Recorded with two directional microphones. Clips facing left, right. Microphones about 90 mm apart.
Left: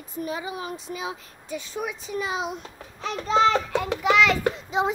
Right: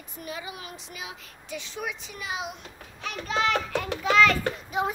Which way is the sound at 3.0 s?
30° left (ahead or behind).